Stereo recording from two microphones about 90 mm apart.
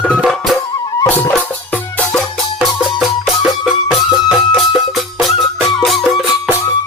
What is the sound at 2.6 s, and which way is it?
Music, 10° right (ahead or behind).